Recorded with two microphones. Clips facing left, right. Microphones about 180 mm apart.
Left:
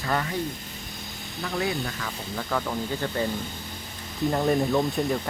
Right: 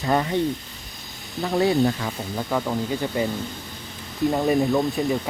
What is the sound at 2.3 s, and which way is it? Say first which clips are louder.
Speech: right 3 dB; 15° right (ahead or behind).